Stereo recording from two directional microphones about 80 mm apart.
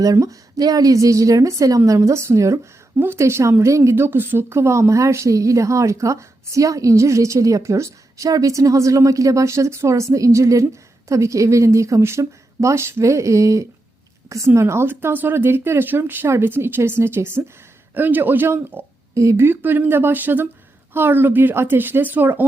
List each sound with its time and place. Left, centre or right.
0.0 s a woman's voice: right
19.1 s speech: right